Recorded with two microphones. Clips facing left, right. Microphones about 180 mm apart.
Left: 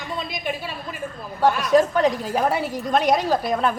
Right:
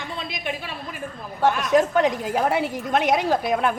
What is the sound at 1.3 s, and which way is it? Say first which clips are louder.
A woman's voice: left 2 dB; 20° right (ahead or behind).